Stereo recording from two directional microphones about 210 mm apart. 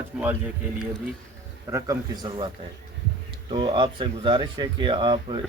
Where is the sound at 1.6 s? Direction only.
15° right (ahead or behind).